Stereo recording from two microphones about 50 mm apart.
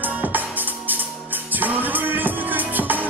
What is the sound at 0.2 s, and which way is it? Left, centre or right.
Music, right.